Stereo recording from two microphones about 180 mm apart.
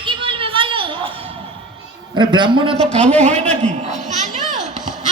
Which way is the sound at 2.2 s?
25° right (ahead or behind).